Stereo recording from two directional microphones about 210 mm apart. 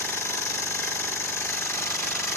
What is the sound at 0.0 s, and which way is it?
Jackhammer, 10° left (ahead or behind).